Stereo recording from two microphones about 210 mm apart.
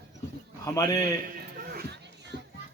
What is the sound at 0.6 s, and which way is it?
Speech, 15° left (ahead or behind).